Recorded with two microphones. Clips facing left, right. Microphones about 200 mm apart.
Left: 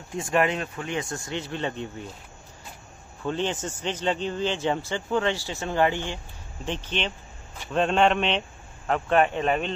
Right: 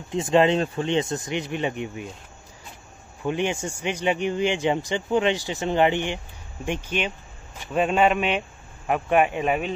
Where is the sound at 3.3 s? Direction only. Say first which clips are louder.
Right 2 dB; 15° right (ahead or behind).